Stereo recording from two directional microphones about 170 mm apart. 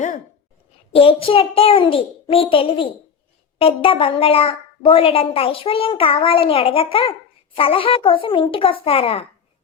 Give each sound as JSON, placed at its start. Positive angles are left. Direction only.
{"t": 0.9, "sound": "a woman's voice", "side_deg": 35}